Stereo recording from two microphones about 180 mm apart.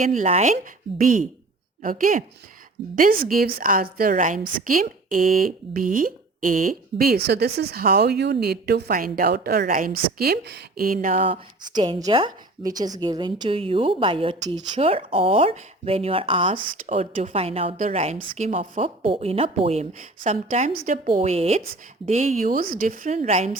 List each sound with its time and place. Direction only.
0.0 s speech: 45° right (ahead or behind)
11.2 s a woman's voice: 30° right (ahead or behind)
14.8 s a woman's voice: 30° right (ahead or behind)
16.8 s speech: 45° right (ahead or behind)
17.3 s a woman's voice: 35° right (ahead or behind)
18.8 s a woman's voice: 30° right (ahead or behind)